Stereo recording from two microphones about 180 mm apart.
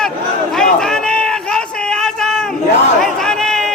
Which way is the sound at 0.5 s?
5° left (ahead or behind).